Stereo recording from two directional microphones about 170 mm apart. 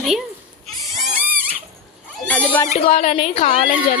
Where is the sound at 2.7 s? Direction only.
35° left (ahead or behind).